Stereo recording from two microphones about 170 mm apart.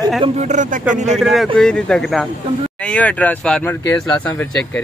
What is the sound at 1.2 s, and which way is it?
Speech, centre (ahead or behind).